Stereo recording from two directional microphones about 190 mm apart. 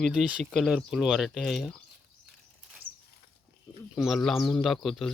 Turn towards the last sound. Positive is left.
turn(degrees=0)  # may be behind; listen again after turning